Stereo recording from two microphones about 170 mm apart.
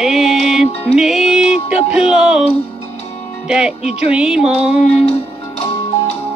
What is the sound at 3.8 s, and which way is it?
Music, 40° left (ahead or behind).